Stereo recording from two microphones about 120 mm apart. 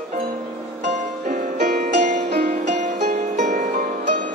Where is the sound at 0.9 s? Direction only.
90° right.